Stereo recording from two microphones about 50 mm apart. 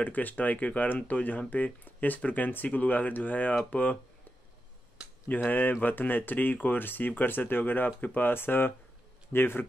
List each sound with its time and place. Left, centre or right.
0.0 s speech: left
5.3 s speech: left